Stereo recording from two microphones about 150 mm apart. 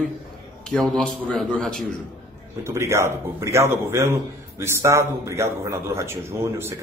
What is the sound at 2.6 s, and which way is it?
Speech, 20° right (ahead or behind).